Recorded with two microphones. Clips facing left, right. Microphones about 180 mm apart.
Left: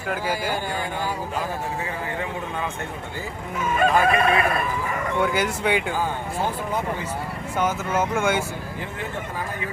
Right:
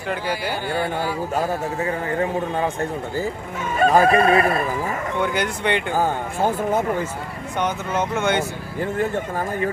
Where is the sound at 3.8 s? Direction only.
40° right (ahead or behind).